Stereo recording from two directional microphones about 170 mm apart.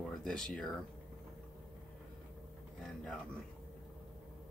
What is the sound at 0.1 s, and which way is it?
Speech, 5° left (ahead or behind).